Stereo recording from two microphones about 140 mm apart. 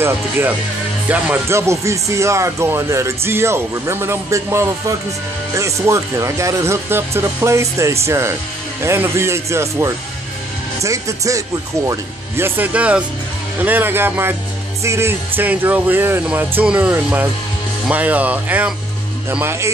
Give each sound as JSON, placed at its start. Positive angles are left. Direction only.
{"t": 0.0, "sound": "speech", "side_deg": -15}